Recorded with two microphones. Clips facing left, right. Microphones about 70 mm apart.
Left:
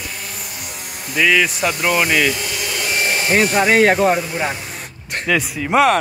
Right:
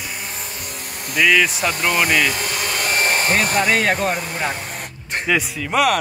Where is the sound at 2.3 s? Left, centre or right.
Right.